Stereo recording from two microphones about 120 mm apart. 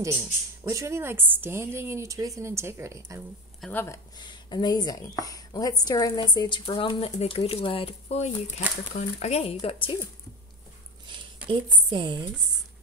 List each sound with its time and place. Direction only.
0.7 s a woman's voice: 25° right (ahead or behind)
3.7 s speech: 25° left (ahead or behind)
4.2 s a woman's voice: 40° left (ahead or behind)
11.4 s a woman's voice: 40° right (ahead or behind)